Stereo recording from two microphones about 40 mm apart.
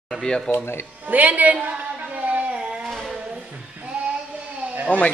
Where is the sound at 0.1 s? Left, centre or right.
Centre.